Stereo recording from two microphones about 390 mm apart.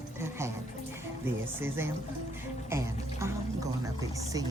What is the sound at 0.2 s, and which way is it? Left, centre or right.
Speech, centre.